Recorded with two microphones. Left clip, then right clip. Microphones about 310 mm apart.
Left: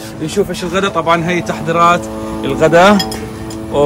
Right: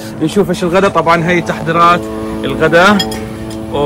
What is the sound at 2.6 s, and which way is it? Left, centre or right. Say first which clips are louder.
Speech: even; centre.